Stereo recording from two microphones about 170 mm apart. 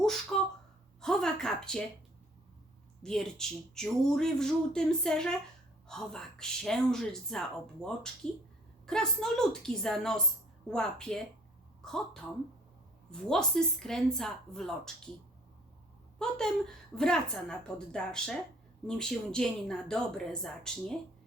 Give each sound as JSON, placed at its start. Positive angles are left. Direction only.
{"t": 1.0, "sound": "speech", "side_deg": 5}
{"t": 3.0, "sound": "a woman's voice", "side_deg": 5}
{"t": 16.1, "sound": "speech", "side_deg": 5}